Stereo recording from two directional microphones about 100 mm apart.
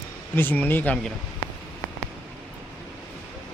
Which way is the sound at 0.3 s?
20° left (ahead or behind).